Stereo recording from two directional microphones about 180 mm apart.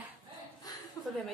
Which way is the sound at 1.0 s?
20° left (ahead or behind).